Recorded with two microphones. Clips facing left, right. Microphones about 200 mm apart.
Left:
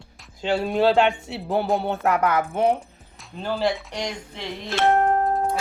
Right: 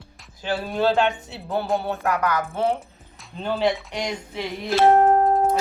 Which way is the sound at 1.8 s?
25° left (ahead or behind).